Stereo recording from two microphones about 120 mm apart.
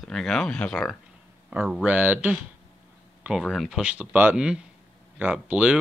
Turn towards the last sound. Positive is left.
turn(degrees=-10)  # may be behind; listen again after turning